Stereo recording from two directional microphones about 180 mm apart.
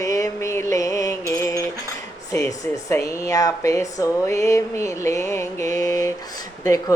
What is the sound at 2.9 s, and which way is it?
A woman's voice, 15° left (ahead or behind).